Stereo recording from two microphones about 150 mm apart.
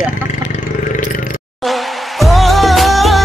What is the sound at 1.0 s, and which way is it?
Roar, 65° left (ahead or behind).